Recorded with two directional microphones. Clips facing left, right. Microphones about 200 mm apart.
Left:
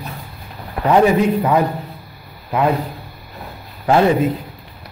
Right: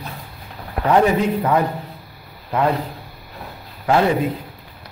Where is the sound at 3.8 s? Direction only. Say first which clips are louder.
Left 3 dB; 25° left (ahead or behind).